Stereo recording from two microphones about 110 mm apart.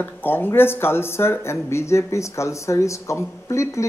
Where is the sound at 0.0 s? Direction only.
20° left (ahead or behind).